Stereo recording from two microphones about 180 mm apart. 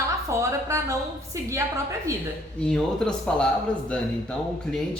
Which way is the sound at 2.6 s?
5° left (ahead or behind).